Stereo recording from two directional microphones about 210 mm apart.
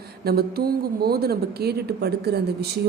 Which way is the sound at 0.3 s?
50° right (ahead or behind).